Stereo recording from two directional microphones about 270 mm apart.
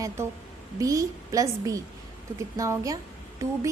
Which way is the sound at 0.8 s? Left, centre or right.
Centre.